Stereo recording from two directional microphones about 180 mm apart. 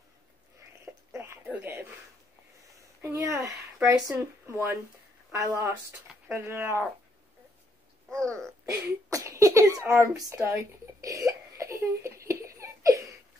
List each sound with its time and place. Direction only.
1.1 s a sound: 15° right (ahead or behind)
2.7 s speech: 15° right (ahead or behind)
8.3 s throat clearing: 15° right (ahead or behind)